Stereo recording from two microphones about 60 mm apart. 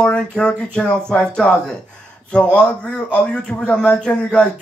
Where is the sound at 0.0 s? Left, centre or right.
Centre.